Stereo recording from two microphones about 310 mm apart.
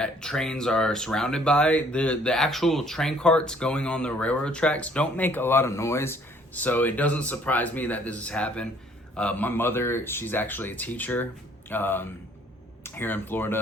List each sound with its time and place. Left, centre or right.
0.0 s speech: centre